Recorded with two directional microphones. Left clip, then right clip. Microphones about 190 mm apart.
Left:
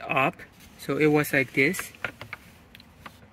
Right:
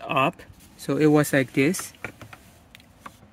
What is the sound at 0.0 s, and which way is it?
Speech, 35° right (ahead or behind).